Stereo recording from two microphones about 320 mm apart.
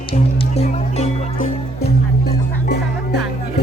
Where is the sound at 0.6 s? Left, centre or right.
Left.